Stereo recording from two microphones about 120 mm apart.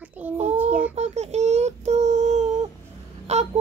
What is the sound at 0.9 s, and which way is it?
Child singing, 65° right (ahead or behind).